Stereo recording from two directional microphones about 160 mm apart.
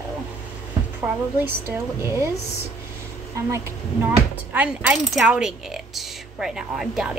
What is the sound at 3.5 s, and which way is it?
A woman's voice, 20° right (ahead or behind).